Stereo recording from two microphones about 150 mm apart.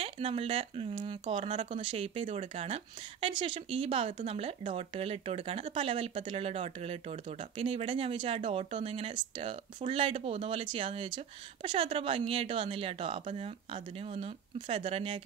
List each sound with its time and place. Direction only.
0.0 s speech: 40° right (ahead or behind)